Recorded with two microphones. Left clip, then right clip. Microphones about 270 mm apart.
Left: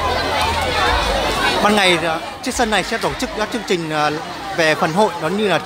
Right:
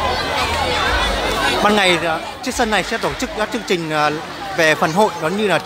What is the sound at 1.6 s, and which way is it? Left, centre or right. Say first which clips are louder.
Speech: even; centre.